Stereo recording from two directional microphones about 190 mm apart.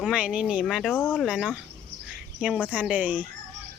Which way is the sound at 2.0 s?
5° right (ahead or behind).